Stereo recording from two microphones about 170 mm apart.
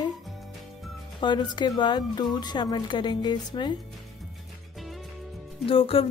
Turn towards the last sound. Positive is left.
turn(degrees=35)  # may be behind; listen again after turning